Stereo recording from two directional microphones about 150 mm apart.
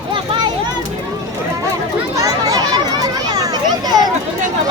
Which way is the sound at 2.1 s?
25° right (ahead or behind).